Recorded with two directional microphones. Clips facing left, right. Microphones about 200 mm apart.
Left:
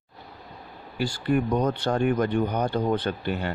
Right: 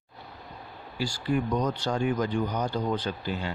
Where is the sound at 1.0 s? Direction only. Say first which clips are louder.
Left 4 dB; 60° left (ahead or behind).